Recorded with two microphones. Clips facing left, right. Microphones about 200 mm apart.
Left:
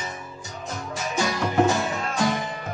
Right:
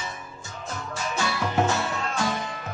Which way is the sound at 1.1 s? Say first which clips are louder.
Left 4 dB; 15° left (ahead or behind).